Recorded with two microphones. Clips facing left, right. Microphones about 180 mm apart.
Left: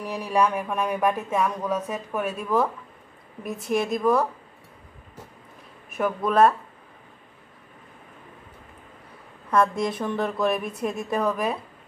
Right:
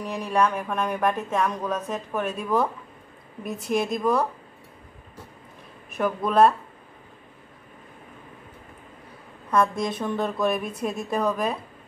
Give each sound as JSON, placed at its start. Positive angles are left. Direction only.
{"t": 0.0, "sound": "speech", "side_deg": 10}
{"t": 5.9, "sound": "speech", "side_deg": 5}
{"t": 9.5, "sound": "speech", "side_deg": 5}